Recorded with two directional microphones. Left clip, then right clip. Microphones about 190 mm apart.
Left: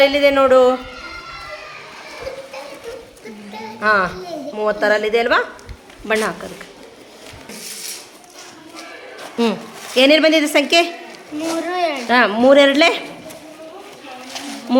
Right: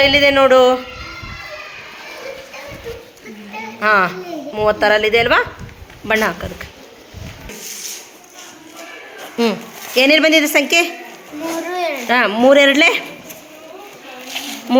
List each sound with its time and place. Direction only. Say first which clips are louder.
0.0 s speech: right 2 dB; 5° right (ahead or behind)
3.8 s speech: right 2 dB; 5° right (ahead or behind)
9.4 s speech: right 2 dB; centre (ahead or behind)
11.7 s speech: left 1 dB; 25° right (ahead or behind)
12.0 s speech: right 1 dB; centre (ahead or behind)
14.7 s speech: right 2 dB; 5° right (ahead or behind)